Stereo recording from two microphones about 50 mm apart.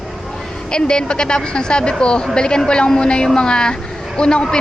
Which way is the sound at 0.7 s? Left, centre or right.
Centre.